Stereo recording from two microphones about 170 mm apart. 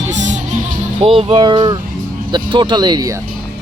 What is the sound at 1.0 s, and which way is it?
Speech, 35° right (ahead or behind).